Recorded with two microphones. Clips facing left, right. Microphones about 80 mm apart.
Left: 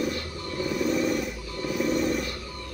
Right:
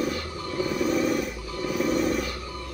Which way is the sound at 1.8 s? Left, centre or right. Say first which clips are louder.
Right 1 dB; centre.